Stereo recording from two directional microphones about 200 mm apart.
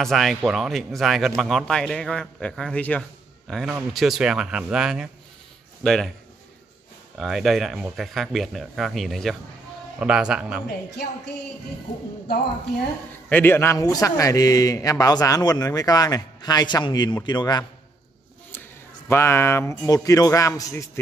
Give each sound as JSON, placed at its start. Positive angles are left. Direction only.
{"t": 0.0, "sound": "speech", "side_deg": 0}
{"t": 7.2, "sound": "speech", "side_deg": 0}
{"t": 13.3, "sound": "a man's voice", "side_deg": 10}
{"t": 19.0, "sound": "a man's voice", "side_deg": 10}